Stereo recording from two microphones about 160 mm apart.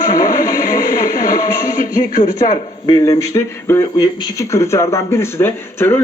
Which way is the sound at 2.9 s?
25° left (ahead or behind).